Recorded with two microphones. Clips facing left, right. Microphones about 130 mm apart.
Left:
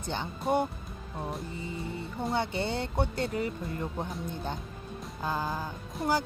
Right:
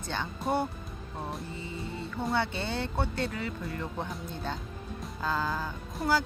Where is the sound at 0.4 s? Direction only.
Centre (ahead or behind).